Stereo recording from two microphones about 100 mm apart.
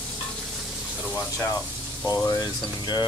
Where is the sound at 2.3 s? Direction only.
45° left (ahead or behind).